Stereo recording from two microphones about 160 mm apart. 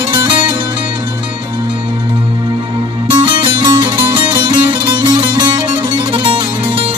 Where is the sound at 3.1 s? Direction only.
30° right (ahead or behind).